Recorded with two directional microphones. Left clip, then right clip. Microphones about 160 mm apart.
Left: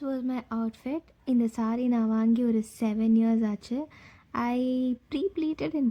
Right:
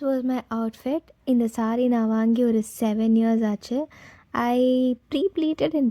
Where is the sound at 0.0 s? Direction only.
35° right (ahead or behind).